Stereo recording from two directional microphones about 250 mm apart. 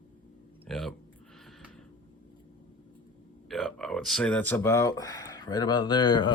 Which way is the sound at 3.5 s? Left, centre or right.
Centre.